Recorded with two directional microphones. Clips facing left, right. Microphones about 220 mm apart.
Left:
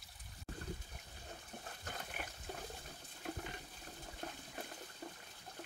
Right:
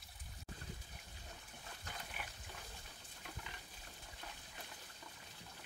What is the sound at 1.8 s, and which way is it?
Water, 45° left (ahead or behind).